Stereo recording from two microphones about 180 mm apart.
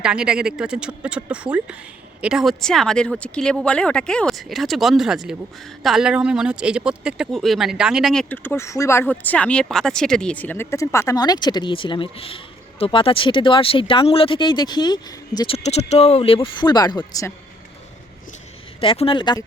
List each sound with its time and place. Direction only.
0.0 s speech: 5° right (ahead or behind); by 17.3 s 20° left (ahead or behind)
18.8 s speech: 30° left (ahead or behind)